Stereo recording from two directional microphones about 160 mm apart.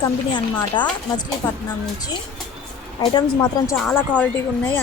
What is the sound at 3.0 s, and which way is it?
Speech, 25° left (ahead or behind).